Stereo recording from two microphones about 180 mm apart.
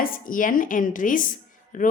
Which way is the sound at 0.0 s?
50° left (ahead or behind).